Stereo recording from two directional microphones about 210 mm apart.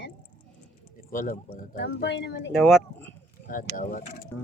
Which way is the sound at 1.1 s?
40° left (ahead or behind).